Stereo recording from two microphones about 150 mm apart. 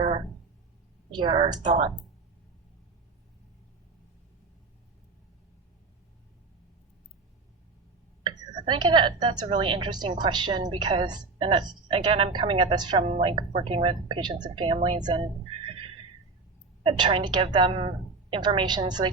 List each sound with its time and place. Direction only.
1.1 s a woman's voice: 30° right (ahead or behind)
8.2 s a woman's voice: 30° right (ahead or behind)
13.1 s a woman's voice: 45° right (ahead or behind)
16.8 s a woman's voice: 35° right (ahead or behind)